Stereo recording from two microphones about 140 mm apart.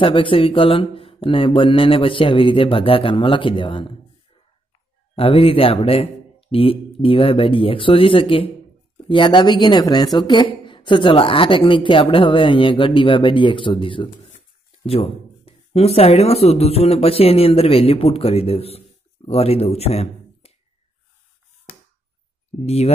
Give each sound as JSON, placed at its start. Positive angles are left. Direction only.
{"t": 0.0, "sound": "a woman's voice", "side_deg": 40}
{"t": 5.1, "sound": "a woman's voice", "side_deg": 45}